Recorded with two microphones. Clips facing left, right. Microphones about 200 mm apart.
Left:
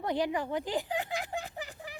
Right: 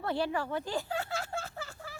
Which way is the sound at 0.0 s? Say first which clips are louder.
Left 1 dB; 15° left (ahead or behind).